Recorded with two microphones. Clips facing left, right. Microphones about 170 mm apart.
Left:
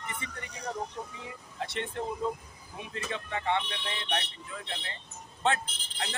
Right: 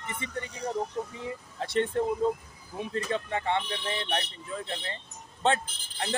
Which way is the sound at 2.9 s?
35° right (ahead or behind).